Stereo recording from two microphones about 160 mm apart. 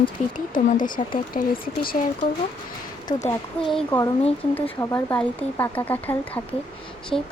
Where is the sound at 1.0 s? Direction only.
35° left (ahead or behind).